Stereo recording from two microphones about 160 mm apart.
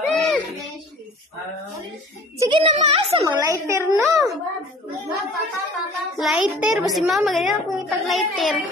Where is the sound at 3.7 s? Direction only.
20° right (ahead or behind).